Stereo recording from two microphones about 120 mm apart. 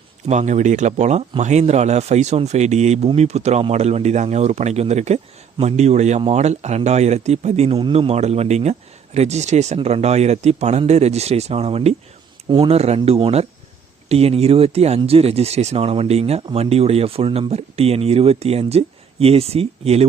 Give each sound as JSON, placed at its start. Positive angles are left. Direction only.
{"t": 0.3, "sound": "speech", "side_deg": -75}
{"t": 9.7, "sound": "speech", "side_deg": -60}